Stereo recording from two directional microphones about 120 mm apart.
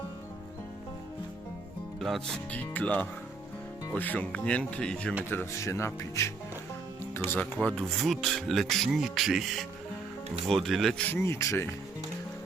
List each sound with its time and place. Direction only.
2.0 s speech: centre (ahead or behind)
5.3 s speech: 20° left (ahead or behind)
7.3 s speech: 15° left (ahead or behind)